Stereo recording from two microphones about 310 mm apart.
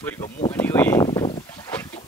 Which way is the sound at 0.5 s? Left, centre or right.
Centre.